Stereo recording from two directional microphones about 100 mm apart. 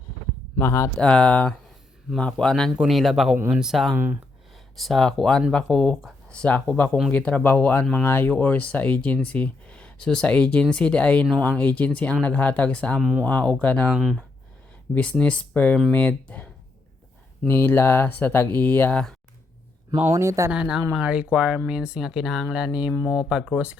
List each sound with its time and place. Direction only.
0.6 s speech: 30° left (ahead or behind)
0.9 s speech: 10° left (ahead or behind)
3.3 s speech: 20° right (ahead or behind)
3.6 s speech: centre (ahead or behind)
3.9 s speech: 20° right (ahead or behind)
4.5 s speech: centre (ahead or behind)
6.2 s speech: 10° left (ahead or behind)
13.0 s speech: 5° right (ahead or behind)
13.2 s speech: 15° left (ahead or behind)
13.9 s speech: 5° right (ahead or behind)
15.2 s speech: 15° left (ahead or behind)
17.5 s speech: 20° left (ahead or behind)
20.1 s speech: 30° right (ahead or behind)
20.5 s speech: 10° right (ahead or behind)